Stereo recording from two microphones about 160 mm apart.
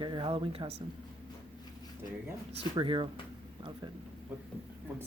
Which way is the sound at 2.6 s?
30° right (ahead or behind).